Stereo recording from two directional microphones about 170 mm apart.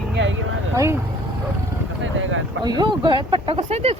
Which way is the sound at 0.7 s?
15° right (ahead or behind).